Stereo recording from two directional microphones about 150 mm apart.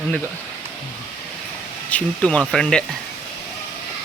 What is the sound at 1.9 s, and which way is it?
Speech, 10° left (ahead or behind).